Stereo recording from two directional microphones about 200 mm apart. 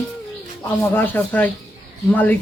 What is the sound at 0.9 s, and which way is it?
Speech, 10° left (ahead or behind).